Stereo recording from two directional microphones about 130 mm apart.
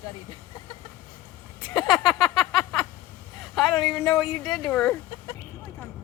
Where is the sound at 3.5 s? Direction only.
Centre (ahead or behind).